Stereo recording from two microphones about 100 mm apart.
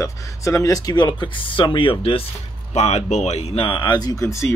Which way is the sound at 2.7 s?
90° left.